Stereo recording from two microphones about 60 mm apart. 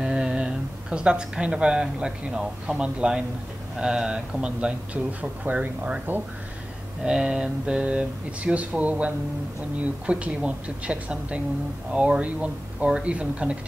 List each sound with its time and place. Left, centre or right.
0.0 s speech: centre
7.0 s speech: centre